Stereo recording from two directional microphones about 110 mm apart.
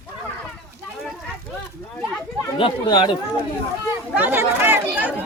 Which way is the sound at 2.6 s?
50° left (ahead or behind).